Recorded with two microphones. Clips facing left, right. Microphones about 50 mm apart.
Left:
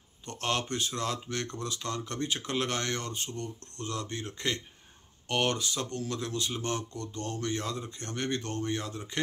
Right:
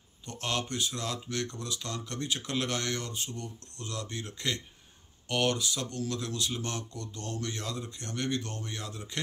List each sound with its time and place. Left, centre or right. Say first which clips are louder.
0.2 s speech: left 2 dB; left